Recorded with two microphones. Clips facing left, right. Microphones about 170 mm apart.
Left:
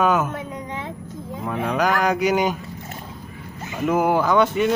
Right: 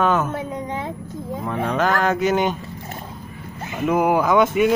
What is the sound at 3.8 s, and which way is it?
Speech, centre (ahead or behind).